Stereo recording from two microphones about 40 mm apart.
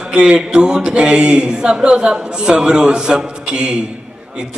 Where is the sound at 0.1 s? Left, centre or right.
Right.